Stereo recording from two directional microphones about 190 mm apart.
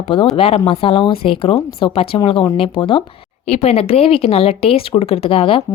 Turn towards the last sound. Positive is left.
turn(degrees=30)  # may be behind; listen again after turning